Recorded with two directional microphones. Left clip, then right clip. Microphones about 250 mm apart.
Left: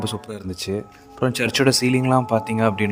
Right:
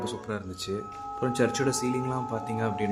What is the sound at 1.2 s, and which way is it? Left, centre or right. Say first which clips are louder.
Speech: left 7 dB; left.